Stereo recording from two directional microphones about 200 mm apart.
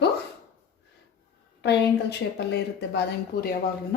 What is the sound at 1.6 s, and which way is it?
Speech, 60° left (ahead or behind).